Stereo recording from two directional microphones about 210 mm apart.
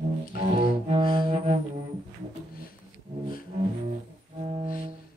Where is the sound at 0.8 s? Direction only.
25° right (ahead or behind).